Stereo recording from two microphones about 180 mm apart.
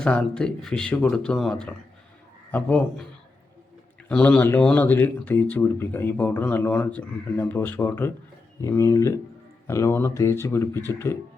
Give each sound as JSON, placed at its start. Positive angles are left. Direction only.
{"t": 0.0, "sound": "speech", "side_deg": 5}
{"t": 4.1, "sound": "speech", "side_deg": 5}